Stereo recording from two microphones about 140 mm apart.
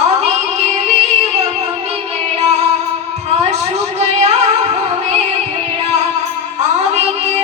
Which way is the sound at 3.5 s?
50° right (ahead or behind).